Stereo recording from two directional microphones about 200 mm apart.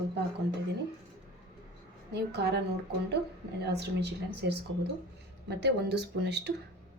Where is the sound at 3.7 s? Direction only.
55° right (ahead or behind).